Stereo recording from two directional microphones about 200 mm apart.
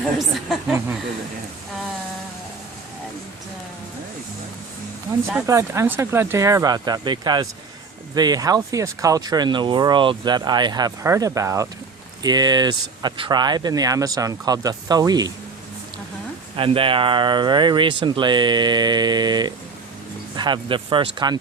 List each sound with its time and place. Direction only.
0.2 s speech: 5° right (ahead or behind)
5.5 s speech: 15° right (ahead or behind)
16.6 s speech: 25° right (ahead or behind)